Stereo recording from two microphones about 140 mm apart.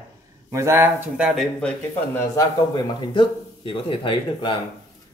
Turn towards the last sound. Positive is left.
turn(degrees=35)  # may be behind; listen again after turning